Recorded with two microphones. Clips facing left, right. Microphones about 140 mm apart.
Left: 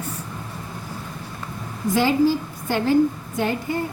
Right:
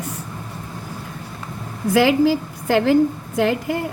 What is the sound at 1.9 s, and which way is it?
A woman's voice, 90° right.